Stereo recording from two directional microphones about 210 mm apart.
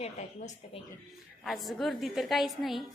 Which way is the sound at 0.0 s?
35° left (ahead or behind).